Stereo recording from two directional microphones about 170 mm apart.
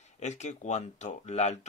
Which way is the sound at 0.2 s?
45° left (ahead or behind).